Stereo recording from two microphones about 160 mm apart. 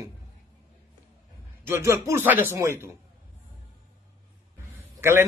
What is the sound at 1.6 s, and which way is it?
Speech, 15° right (ahead or behind).